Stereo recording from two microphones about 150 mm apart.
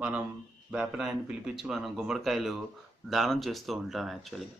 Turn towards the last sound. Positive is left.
turn(degrees=0)  # may be behind; listen again after turning